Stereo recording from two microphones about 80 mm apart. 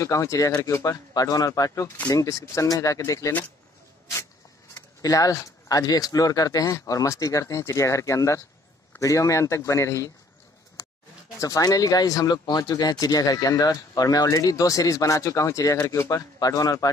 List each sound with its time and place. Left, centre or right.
0.0 s speech: left
0.7 s speech: left
1.1 s speech: left
4.7 s speech: left
11.4 s speech: left
16.3 s speech: left